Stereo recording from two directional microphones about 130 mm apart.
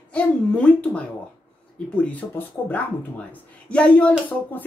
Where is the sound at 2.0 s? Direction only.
10° left (ahead or behind).